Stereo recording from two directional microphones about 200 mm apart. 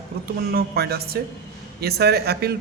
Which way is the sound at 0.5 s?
50° right (ahead or behind).